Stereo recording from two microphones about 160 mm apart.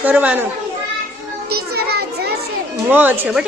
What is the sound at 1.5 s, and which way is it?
Speech, 75° right (ahead or behind).